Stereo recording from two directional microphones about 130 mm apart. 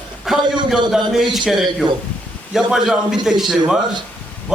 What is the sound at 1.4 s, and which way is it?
A man's voice, centre (ahead or behind).